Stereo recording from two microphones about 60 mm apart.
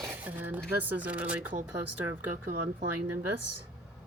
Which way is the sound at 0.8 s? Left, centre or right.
Right.